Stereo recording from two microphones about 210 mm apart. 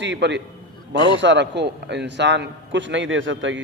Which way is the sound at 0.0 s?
55° right (ahead or behind).